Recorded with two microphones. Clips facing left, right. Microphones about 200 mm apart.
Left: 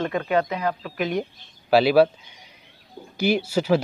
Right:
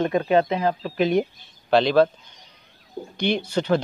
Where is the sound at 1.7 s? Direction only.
10° left (ahead or behind).